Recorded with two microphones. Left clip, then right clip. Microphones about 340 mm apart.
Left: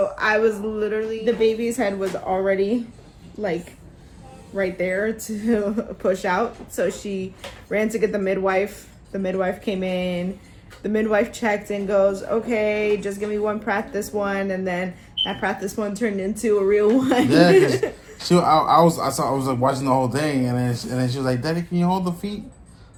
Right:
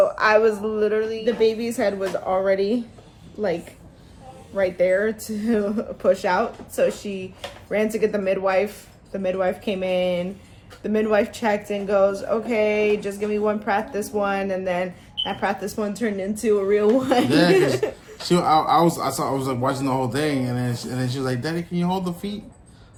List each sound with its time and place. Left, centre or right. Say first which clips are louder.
0.2 s speech: right 2 dB; centre
4.5 s speech: right 4 dB; centre
13.2 s a woman's voice: right 3 dB; right
14.3 s speech: right 1 dB; centre
17.2 s speech: left 6 dB; centre